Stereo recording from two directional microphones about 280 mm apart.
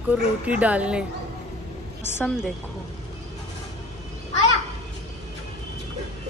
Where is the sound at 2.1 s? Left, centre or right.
Centre.